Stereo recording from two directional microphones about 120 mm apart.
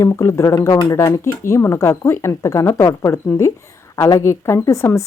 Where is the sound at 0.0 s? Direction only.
25° left (ahead or behind).